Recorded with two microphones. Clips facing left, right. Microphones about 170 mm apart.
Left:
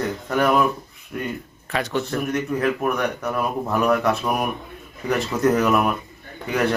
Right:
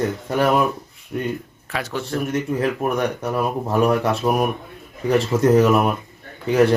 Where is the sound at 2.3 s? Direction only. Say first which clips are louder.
Even; 30° right (ahead or behind).